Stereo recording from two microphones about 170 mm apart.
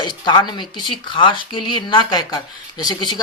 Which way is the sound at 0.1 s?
25° left (ahead or behind).